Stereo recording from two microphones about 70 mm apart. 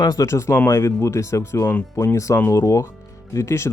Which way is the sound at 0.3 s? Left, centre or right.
Left.